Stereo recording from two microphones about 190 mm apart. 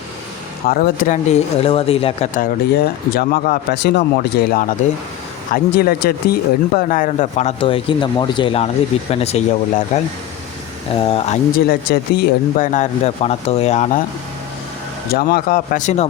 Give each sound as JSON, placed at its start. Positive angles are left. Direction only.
{"t": 0.7, "sound": "speech", "side_deg": 50}
{"t": 5.7, "sound": "speech", "side_deg": 55}
{"t": 10.9, "sound": "speech", "side_deg": 30}
{"t": 11.5, "sound": "speech", "side_deg": 55}
{"t": 12.7, "sound": "speech", "side_deg": 35}
{"t": 15.1, "sound": "speech", "side_deg": 50}